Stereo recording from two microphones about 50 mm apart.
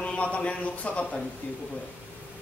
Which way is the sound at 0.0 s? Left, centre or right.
Left.